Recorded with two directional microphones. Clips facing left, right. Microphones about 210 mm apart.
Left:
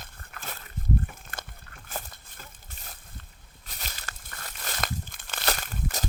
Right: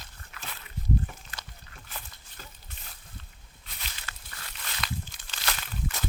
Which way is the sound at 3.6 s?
45° left (ahead or behind).